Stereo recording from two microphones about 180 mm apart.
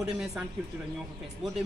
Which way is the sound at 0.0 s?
5° right (ahead or behind).